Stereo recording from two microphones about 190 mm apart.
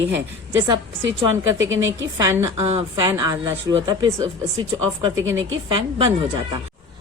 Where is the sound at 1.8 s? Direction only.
15° right (ahead or behind).